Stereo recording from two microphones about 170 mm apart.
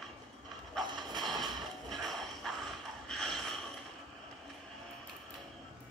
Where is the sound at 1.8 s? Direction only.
Centre (ahead or behind).